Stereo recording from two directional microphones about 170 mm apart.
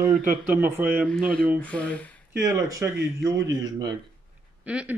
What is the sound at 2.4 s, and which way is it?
Speech, 15° right (ahead or behind).